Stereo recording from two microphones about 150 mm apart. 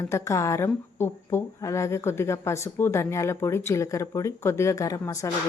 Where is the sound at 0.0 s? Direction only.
20° left (ahead or behind).